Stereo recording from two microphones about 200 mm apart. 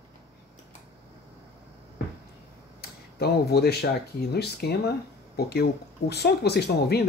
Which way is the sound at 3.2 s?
50° left (ahead or behind).